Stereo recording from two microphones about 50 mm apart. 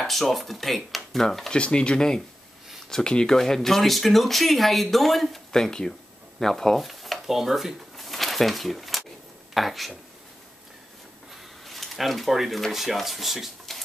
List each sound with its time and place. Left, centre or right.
0.0 s speech: centre
1.5 s speech: centre
11.6 s speech: centre